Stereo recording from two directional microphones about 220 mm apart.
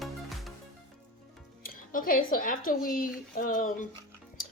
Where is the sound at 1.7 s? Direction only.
40° left (ahead or behind).